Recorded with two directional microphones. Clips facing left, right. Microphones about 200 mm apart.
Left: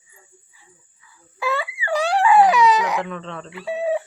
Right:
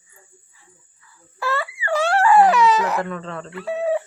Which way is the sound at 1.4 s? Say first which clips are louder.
Left 1 dB; centre (ahead or behind).